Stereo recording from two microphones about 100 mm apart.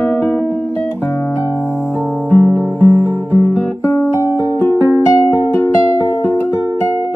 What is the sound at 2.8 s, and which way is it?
Music, 25° left (ahead or behind).